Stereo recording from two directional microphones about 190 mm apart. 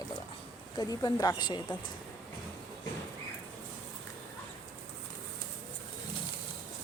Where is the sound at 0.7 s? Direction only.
20° left (ahead or behind).